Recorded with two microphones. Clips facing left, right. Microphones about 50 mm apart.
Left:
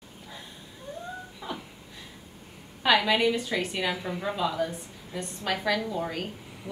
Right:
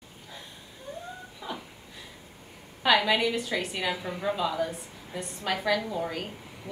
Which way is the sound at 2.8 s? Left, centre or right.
Centre.